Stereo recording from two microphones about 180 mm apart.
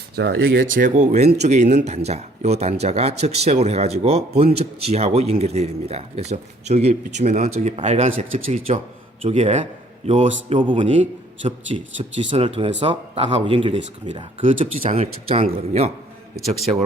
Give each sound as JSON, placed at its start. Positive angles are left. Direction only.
{"t": 0.2, "sound": "speech", "side_deg": -70}
{"t": 0.7, "sound": "speech", "side_deg": -45}